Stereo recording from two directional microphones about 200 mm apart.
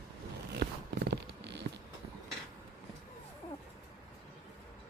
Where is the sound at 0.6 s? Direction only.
60° right (ahead or behind).